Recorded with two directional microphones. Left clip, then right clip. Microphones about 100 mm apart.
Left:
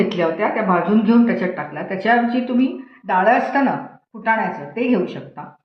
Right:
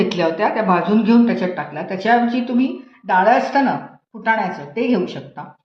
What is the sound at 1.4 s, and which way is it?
Speech, 15° right (ahead or behind).